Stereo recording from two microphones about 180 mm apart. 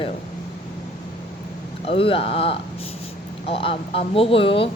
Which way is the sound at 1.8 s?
30° left (ahead or behind).